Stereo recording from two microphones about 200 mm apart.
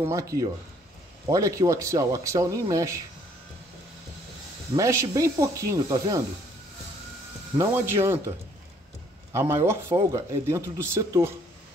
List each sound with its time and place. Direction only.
0.0 s speech: 15° right (ahead or behind)
4.7 s speech: 15° right (ahead or behind)
7.5 s speech: 15° right (ahead or behind)
9.3 s speech: 15° right (ahead or behind)